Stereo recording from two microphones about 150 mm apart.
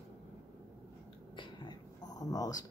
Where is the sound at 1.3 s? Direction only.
30° left (ahead or behind).